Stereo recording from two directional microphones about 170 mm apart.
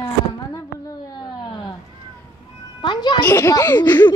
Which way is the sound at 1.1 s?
25° left (ahead or behind).